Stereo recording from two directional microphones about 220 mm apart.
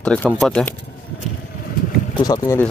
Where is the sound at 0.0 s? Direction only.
5° left (ahead or behind).